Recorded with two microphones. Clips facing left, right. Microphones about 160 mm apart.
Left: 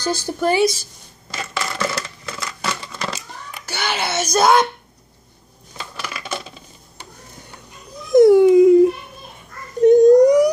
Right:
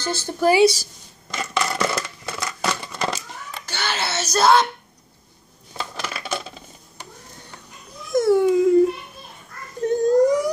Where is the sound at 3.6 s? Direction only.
10° left (ahead or behind).